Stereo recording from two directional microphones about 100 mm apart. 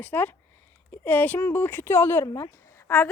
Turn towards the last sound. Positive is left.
turn(degrees=25)  # may be behind; listen again after turning